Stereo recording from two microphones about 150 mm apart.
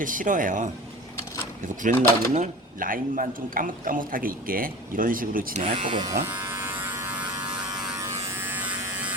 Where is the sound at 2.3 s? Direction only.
60° right (ahead or behind).